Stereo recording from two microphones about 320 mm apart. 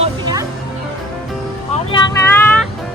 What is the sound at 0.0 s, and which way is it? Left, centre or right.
Music, centre.